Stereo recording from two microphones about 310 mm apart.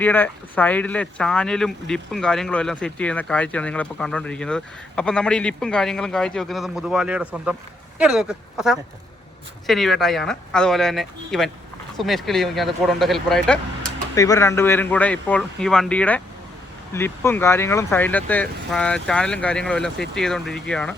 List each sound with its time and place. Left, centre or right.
0.0 s speech: centre